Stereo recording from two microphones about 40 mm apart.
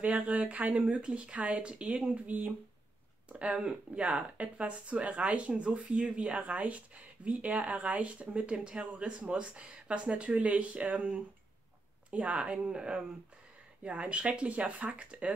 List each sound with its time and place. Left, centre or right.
0.2 s speech: right
2.2 s speech: right
3.3 s speech: right
3.5 s speech: centre
4.0 s speech: right